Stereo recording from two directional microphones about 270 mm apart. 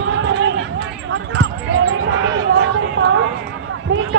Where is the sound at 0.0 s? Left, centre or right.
Right.